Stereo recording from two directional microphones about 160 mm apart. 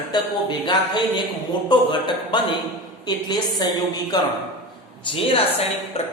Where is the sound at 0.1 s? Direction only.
25° left (ahead or behind).